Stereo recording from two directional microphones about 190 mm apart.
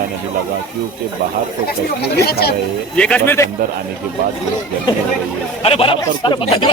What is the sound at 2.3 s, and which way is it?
Speech, 55° left (ahead or behind).